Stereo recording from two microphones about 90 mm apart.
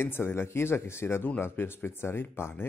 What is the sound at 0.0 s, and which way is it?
Speech, 25° left (ahead or behind).